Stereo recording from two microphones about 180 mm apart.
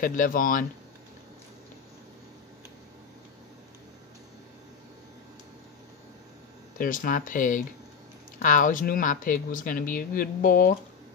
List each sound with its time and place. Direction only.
0.0 s speech: 50° left (ahead or behind)
6.8 s speech: 50° left (ahead or behind)